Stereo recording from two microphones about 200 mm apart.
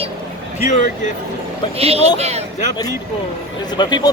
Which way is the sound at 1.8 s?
30° right (ahead or behind).